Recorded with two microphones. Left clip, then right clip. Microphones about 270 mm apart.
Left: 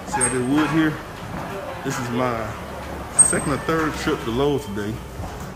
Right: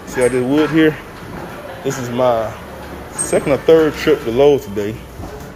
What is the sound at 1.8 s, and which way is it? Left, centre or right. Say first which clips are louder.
Speech: right 8 dB; centre.